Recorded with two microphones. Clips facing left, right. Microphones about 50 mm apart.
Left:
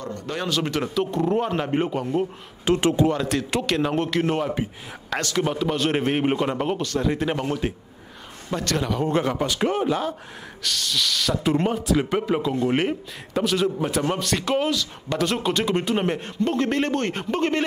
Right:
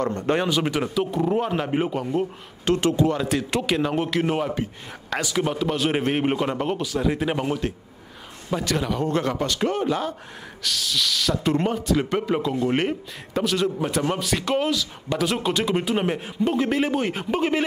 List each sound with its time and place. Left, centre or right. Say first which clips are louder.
0.1 s speech: right 6 dB; right
0.5 s speech: right 1 dB; centre
2.7 s speech: left 1 dB; left
3.1 s speech: even; centre
9.0 s a man's voice: left 1 dB; centre